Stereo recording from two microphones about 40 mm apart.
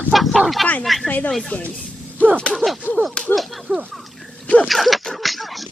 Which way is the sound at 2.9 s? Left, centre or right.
Left.